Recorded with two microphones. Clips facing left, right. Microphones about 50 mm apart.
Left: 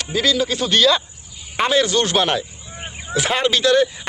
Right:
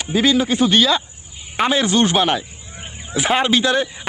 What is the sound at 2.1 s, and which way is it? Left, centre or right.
Speech, centre.